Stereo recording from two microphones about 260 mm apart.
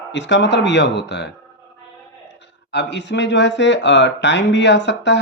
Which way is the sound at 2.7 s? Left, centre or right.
Left.